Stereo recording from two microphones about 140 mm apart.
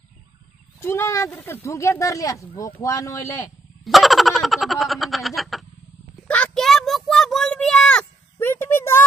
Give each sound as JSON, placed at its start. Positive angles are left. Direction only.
{"t": 0.7, "sound": "speech", "side_deg": 20}
{"t": 3.8, "sound": "laughter", "side_deg": 0}
{"t": 6.2, "sound": "a sound", "side_deg": 10}